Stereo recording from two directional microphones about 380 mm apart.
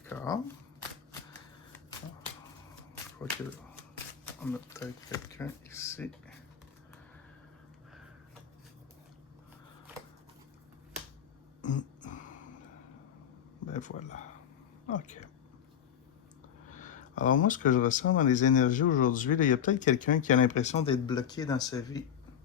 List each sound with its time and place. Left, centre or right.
0.0 s shuffling cards: centre
4.4 s speech: centre
12.0 s a sound: centre
13.7 s speech: centre
16.7 s a sound: centre
17.4 s speech: left